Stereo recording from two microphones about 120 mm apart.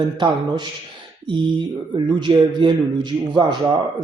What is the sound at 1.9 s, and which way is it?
Speech, 40° right (ahead or behind).